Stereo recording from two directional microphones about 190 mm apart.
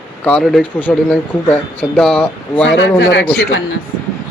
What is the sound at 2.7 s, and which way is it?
Speech, 70° left (ahead or behind).